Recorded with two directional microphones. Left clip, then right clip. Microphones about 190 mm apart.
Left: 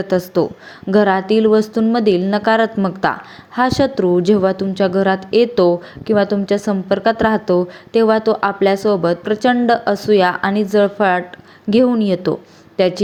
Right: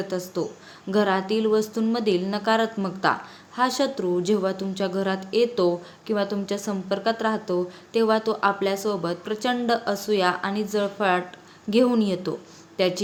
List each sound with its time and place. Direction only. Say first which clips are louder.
0.0 s a woman's voice: left 11 dB; 35° left (ahead or behind)